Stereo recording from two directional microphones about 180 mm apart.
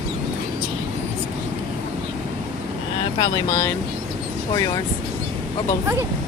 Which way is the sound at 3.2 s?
15° left (ahead or behind).